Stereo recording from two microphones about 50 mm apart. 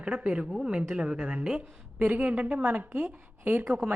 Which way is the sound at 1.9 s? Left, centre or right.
Right.